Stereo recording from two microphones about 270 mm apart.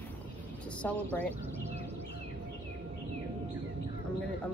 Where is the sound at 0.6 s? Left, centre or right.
Centre.